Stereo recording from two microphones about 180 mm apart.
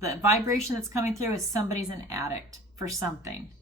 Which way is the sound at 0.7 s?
15° right (ahead or behind).